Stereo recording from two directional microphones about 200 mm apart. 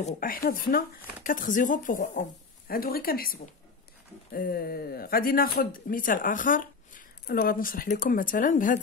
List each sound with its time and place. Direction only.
0.0 s speech: 45° left (ahead or behind)